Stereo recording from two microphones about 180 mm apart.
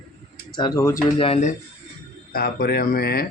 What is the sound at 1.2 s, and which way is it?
Speech, 35° left (ahead or behind).